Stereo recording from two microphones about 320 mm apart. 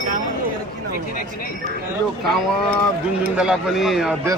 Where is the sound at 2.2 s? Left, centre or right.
Centre.